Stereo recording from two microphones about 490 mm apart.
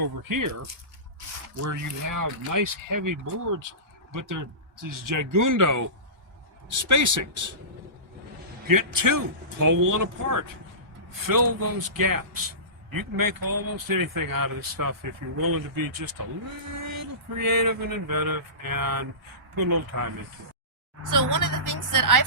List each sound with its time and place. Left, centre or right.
0.0 s speech: right
8.6 s speech: right
11.3 s a sound: right
19.9 s speech: right